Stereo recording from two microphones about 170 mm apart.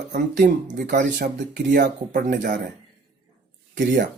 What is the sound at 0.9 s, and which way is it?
Speech, 80° right.